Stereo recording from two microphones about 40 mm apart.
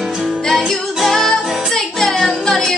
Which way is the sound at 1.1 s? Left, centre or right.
Centre.